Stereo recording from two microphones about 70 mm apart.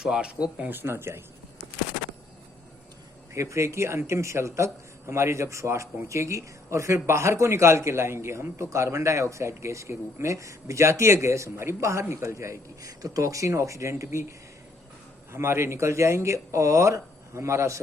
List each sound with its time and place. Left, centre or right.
0.0 s speech: centre
0.6 s speech: right
3.3 s speech: right